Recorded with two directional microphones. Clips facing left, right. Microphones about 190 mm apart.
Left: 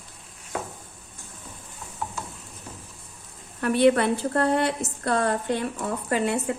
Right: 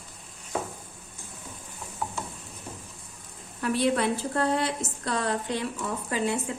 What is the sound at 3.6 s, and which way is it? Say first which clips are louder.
A woman's voice: left 6 dB; 60° left (ahead or behind).